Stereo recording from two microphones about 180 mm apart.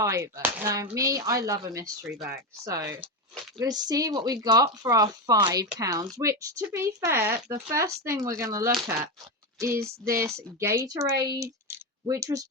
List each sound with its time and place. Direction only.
0.0 s speech: 15° right (ahead or behind)